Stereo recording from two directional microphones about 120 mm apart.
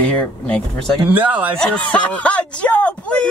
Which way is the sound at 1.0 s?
15° right (ahead or behind).